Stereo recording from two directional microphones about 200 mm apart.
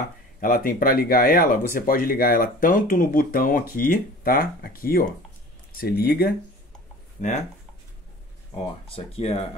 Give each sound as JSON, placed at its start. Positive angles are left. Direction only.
{"t": 0.4, "sound": "speech", "side_deg": 45}
{"t": 7.2, "sound": "speech", "side_deg": 35}
{"t": 8.9, "sound": "speech", "side_deg": 30}